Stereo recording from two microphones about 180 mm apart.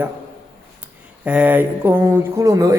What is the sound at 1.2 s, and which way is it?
A man's voice, 10° right (ahead or behind).